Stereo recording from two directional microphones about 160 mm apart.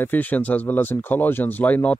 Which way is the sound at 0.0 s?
10° left (ahead or behind).